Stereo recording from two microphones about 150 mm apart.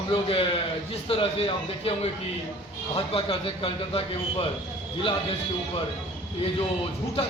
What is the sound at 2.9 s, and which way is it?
A man's voice, 40° left (ahead or behind).